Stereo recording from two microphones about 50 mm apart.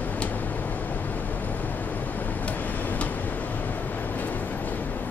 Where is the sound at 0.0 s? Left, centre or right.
Left.